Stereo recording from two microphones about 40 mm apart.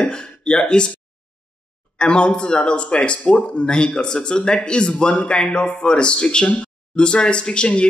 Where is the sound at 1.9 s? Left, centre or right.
Left.